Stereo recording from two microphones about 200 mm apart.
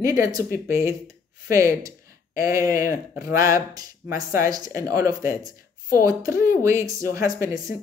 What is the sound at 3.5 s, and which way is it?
Speech, 15° right (ahead or behind).